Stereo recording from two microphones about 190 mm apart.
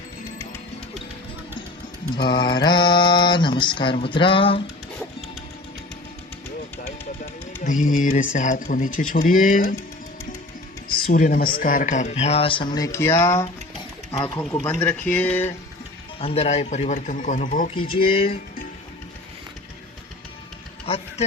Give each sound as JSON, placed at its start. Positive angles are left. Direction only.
{"t": 2.2, "sound": "mantra", "side_deg": 25}
{"t": 7.6, "sound": "speech", "side_deg": 45}
{"t": 11.0, "sound": "speech", "side_deg": 50}
{"t": 12.7, "sound": "a sound", "side_deg": 15}
{"t": 16.2, "sound": "speech", "side_deg": 35}
{"t": 17.7, "sound": "mantra", "side_deg": 30}
{"t": 20.8, "sound": "a sound", "side_deg": 30}